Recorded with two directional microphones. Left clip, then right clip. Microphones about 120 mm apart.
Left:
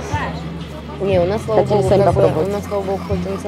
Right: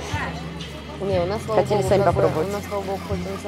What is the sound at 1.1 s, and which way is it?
Speech, 5° right (ahead or behind).